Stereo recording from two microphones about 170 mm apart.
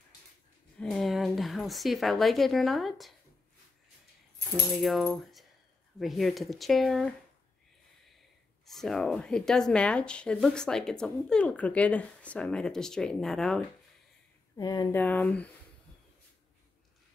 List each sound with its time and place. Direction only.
0.7 s speech: centre (ahead or behind)
4.7 s speech: centre (ahead or behind)
8.6 s speech: centre (ahead or behind)
14.6 s speech: 20° left (ahead or behind)
15.0 s speech: 10° left (ahead or behind)